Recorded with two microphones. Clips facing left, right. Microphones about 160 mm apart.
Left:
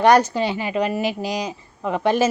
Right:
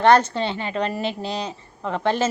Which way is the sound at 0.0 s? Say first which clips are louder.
Left 1 dB; 10° left (ahead or behind).